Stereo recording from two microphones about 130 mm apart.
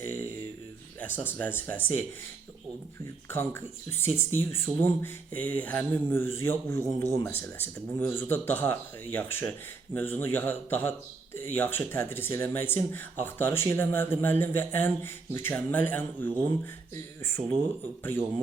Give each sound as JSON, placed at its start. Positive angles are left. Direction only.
{"t": 0.0, "sound": "a sound", "side_deg": 15}
{"t": 0.9, "sound": "speech", "side_deg": 15}
{"t": 3.3, "sound": "speech", "side_deg": 20}